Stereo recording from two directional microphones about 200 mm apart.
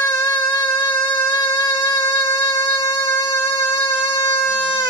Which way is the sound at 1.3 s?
15° left (ahead or behind).